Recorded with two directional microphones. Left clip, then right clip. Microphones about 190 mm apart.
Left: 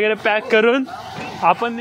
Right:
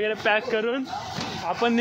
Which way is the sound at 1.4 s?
65° left (ahead or behind).